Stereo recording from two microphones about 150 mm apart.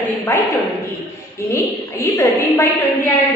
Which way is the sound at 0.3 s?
15° left (ahead or behind).